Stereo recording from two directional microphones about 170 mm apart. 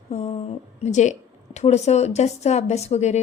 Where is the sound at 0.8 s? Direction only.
45° left (ahead or behind).